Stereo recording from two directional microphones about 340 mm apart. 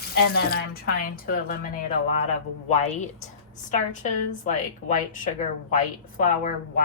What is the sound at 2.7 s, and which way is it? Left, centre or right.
A woman's voice, centre.